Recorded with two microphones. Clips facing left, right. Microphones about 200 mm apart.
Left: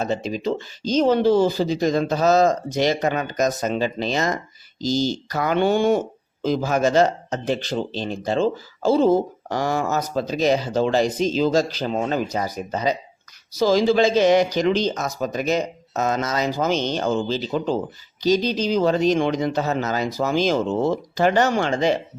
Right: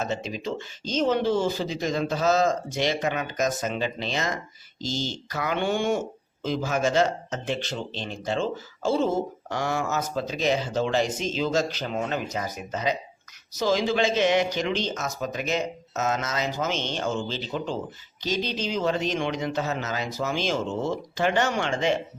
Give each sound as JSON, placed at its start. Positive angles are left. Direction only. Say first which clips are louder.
{"t": 0.0, "sound": "speech", "louder": "left 6 dB", "side_deg": 35}